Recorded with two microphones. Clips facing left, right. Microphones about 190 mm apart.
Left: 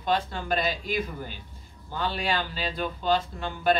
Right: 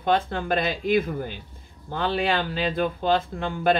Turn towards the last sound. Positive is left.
turn(degrees=-55)  # may be behind; listen again after turning